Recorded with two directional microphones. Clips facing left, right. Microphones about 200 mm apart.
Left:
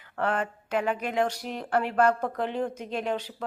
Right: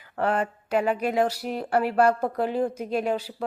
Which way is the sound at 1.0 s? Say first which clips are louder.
Right 4 dB; 5° right (ahead or behind).